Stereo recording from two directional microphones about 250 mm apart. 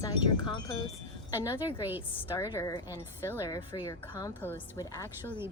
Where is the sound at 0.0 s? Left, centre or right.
Centre.